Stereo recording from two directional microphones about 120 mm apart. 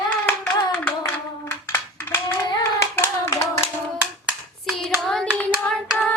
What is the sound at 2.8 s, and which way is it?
Hands, 20° left (ahead or behind).